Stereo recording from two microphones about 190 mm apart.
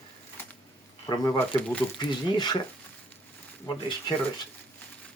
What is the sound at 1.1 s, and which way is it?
Speech, 15° left (ahead or behind).